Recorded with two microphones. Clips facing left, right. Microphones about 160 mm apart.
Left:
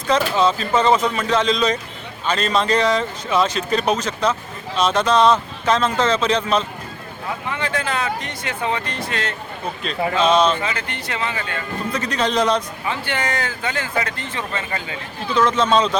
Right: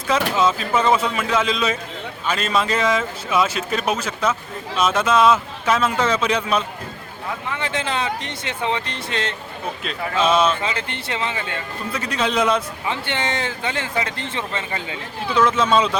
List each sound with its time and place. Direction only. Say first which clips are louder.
0.3 s speech: left 1 dB; 5° right (ahead or behind)
7.6 s speech: left 1 dB; 25° right (ahead or behind)
10.2 s speech: left 1 dB; 5° right (ahead or behind)
10.6 s speech: even; 25° right (ahead or behind)
11.9 s speech: left 1 dB; 10° right (ahead or behind)
12.9 s speech: left 1 dB; 25° right (ahead or behind)
15.4 s speech: left 1 dB; 5° right (ahead or behind)